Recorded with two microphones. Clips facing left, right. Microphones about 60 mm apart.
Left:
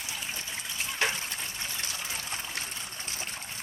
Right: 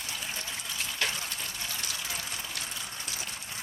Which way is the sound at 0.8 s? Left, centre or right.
Left.